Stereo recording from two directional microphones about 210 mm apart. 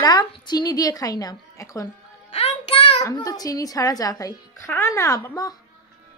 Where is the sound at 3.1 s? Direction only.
15° left (ahead or behind).